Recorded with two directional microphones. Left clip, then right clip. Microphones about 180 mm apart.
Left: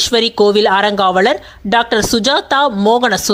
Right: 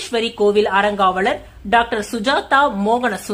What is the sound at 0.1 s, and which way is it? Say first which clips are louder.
Speech: left 1 dB; 45° left (ahead or behind).